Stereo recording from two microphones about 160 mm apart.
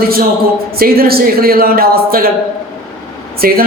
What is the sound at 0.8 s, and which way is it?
Speech, 70° right (ahead or behind).